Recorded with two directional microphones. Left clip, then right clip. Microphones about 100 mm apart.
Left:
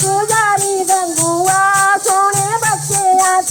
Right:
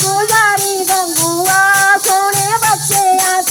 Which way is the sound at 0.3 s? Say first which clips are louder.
Right 2 dB; 20° left (ahead or behind).